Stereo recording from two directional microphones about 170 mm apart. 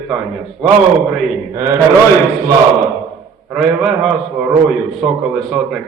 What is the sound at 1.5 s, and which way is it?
Speech, 15° right (ahead or behind).